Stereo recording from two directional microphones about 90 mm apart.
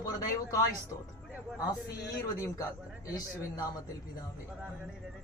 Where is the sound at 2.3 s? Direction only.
35° left (ahead or behind).